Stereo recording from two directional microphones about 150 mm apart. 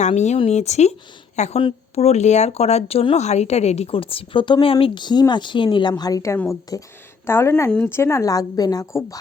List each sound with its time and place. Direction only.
0.0 s speech: 50° left (ahead or behind); by 9.1 s 20° left (ahead or behind)